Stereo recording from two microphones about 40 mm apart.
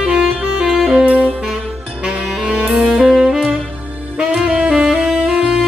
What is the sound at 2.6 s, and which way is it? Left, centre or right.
Music, right.